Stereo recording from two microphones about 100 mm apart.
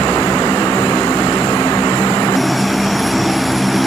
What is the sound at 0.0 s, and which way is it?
Vehicle, 40° left (ahead or behind).